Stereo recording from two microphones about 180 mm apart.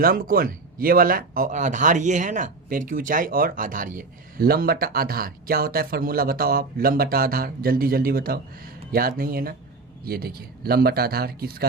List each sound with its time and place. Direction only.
0.0 s speech: 55° right (ahead or behind)